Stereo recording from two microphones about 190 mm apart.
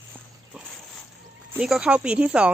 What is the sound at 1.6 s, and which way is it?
Speech, 5° right (ahead or behind).